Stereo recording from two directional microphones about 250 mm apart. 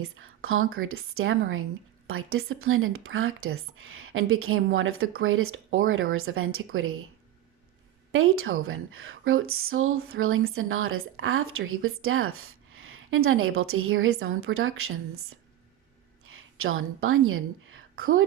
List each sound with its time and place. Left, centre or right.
0.0 s speech: right
8.1 s a woman's voice: right